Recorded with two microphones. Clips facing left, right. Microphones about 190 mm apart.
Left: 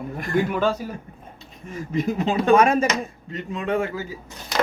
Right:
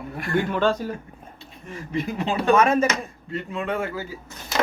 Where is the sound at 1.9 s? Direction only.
45° left (ahead or behind).